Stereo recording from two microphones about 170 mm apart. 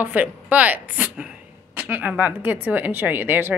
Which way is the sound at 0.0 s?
10° right (ahead or behind).